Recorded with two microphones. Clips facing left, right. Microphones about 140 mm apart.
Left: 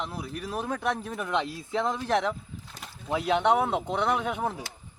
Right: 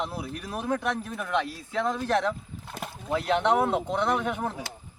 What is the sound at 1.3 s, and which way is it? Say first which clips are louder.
Speech: even; 20° left (ahead or behind).